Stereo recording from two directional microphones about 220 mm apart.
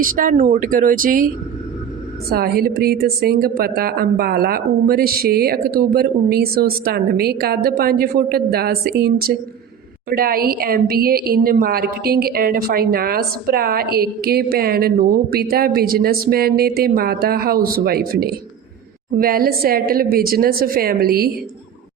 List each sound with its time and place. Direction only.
0.0 s speech: 40° right (ahead or behind)
2.3 s a woman's voice: 45° right (ahead or behind)